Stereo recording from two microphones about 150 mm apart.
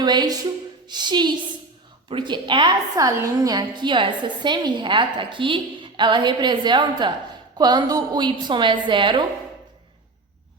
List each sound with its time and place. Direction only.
0.0 s a woman's voice: 30° right (ahead or behind)